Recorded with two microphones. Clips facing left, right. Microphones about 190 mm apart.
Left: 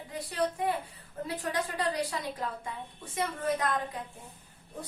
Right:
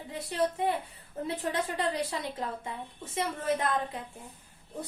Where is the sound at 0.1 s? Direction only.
25° right (ahead or behind).